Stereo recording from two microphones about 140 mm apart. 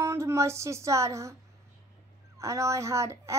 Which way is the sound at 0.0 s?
20° right (ahead or behind).